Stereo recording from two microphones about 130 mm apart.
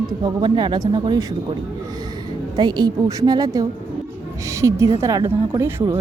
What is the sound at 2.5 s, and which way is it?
A woman's voice, 35° right (ahead or behind).